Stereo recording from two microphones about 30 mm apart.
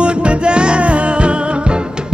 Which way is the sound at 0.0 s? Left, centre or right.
Right.